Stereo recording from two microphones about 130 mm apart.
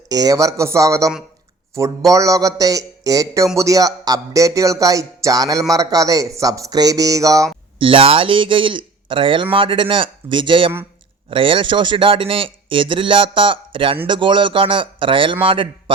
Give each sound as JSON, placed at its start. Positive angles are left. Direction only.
{"t": 0.1, "sound": "speech", "side_deg": -30}
{"t": 7.8, "sound": "a man's voice", "side_deg": -45}